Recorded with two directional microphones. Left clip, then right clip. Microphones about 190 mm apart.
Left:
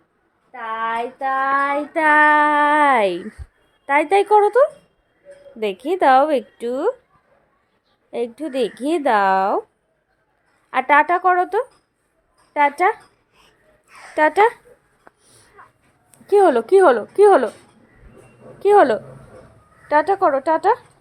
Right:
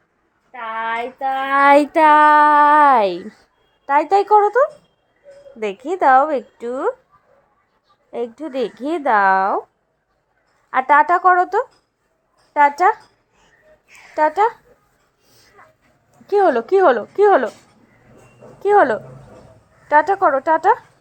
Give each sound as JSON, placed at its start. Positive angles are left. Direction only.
{"t": 0.5, "sound": "a sound", "side_deg": -15}
{"t": 1.5, "sound": "child singing", "side_deg": -60}
{"t": 1.9, "sound": "child singing", "side_deg": -25}
{"t": 2.1, "sound": "a woman's voice", "side_deg": -10}
{"t": 8.1, "sound": "speech", "side_deg": 5}
{"t": 10.7, "sound": "a woman's voice", "side_deg": 0}
{"t": 13.3, "sound": "a sound", "side_deg": 20}
{"t": 15.6, "sound": "a sound", "side_deg": -30}
{"t": 16.2, "sound": "a woman's voice", "side_deg": 0}
{"t": 18.6, "sound": "a woman's voice", "side_deg": 5}